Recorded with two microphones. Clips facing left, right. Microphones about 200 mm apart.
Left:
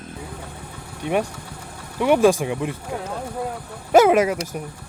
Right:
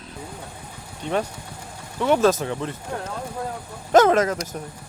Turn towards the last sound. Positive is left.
turn(degrees=10)  # may be behind; listen again after turning